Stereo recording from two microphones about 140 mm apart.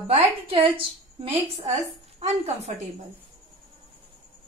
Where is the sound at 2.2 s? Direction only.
55° right (ahead or behind).